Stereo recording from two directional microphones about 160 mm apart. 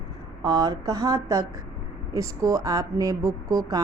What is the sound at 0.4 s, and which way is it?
A woman's voice, 25° right (ahead or behind).